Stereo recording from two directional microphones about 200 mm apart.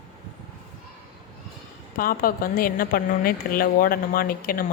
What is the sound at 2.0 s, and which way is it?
A woman's voice, 45° left (ahead or behind).